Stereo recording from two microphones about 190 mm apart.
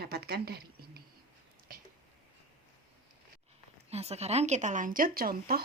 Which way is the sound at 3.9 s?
35° right (ahead or behind).